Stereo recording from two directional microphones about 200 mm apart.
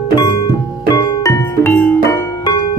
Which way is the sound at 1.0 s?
15° left (ahead or behind).